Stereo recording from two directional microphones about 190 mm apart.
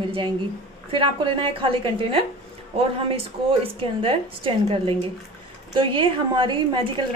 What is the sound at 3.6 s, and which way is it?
A woman's voice, 30° right (ahead or behind).